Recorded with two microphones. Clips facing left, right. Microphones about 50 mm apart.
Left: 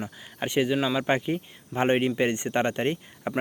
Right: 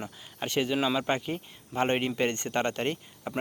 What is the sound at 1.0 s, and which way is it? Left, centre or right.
Speech, centre.